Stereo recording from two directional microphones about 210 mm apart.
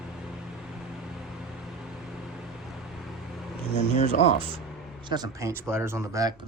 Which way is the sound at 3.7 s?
30° left (ahead or behind).